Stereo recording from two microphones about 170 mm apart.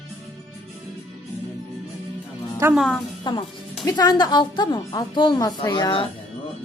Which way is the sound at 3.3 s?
25° left (ahead or behind).